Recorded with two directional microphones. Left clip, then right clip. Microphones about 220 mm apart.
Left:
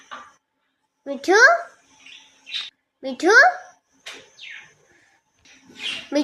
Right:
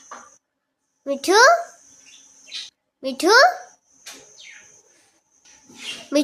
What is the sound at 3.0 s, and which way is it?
Speech, 15° right (ahead or behind).